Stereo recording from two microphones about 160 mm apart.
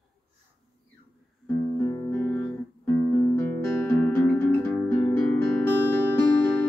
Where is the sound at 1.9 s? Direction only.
25° left (ahead or behind).